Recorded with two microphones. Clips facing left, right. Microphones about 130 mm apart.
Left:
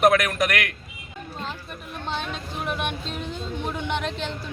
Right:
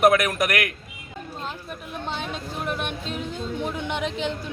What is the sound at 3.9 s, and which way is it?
Speech, 10° right (ahead or behind).